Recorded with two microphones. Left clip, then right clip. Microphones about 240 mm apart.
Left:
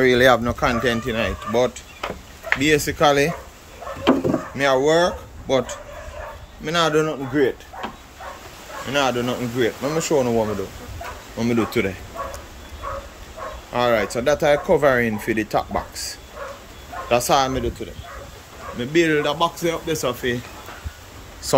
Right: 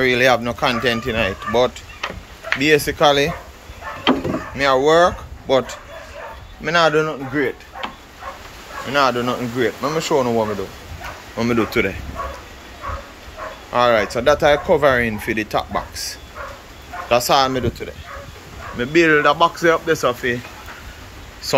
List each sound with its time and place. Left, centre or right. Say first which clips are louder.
0.0 s speech: even; left
4.6 s speech: right 4 dB; centre
8.9 s speech: right 4 dB; centre
13.7 s speech: right 4 dB; centre
17.1 s speech: right 3 dB; centre
21.4 s a sound: even; left